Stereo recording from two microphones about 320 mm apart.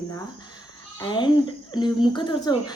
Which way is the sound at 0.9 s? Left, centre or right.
Centre.